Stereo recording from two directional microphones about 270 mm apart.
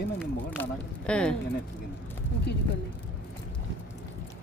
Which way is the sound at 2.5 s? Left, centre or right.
Left.